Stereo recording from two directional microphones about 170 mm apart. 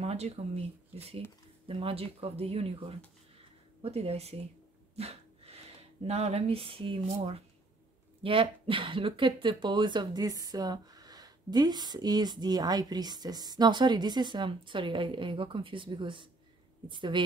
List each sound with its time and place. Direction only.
0.0 s speech: 35° right (ahead or behind)